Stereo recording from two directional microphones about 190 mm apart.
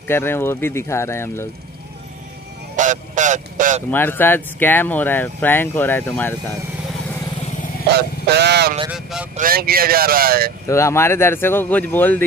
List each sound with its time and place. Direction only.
0.1 s speech: 10° left (ahead or behind)
2.7 s a sound: 40° right (ahead or behind)
3.9 s speech: 10° left (ahead or behind)
7.9 s speech: 60° right (ahead or behind)
8.9 s speech: 5° right (ahead or behind)
9.4 s speech: 50° right (ahead or behind)
10.7 s speech: 15° left (ahead or behind)